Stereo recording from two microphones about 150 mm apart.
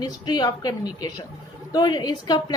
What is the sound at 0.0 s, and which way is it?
Speech, 25° left (ahead or behind).